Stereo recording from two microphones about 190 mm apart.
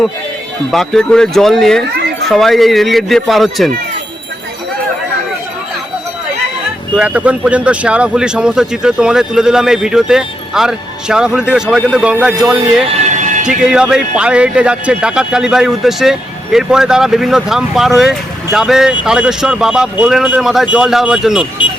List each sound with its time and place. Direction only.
0.7 s speech: centre (ahead or behind)
6.9 s speech: 5° right (ahead or behind)
12.9 s a sound: 35° right (ahead or behind)
13.6 s speech: 5° right (ahead or behind)